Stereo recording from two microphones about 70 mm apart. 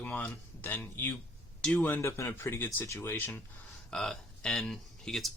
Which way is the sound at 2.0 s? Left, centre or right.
Left.